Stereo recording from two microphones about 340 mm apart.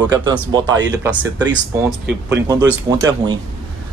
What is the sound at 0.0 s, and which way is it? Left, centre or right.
Speech, centre.